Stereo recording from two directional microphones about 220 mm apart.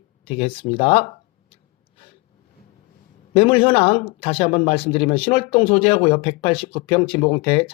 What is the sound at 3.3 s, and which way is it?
Speech, 25° left (ahead or behind).